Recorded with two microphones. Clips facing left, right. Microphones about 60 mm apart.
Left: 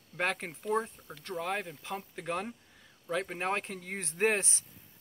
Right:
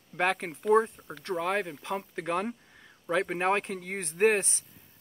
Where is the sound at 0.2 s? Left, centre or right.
Centre.